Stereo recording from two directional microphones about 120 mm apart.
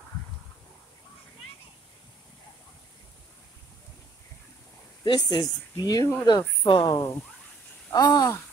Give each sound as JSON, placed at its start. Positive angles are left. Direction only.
{"t": 5.0, "sound": "speech", "side_deg": 35}
{"t": 7.9, "sound": "speech", "side_deg": 30}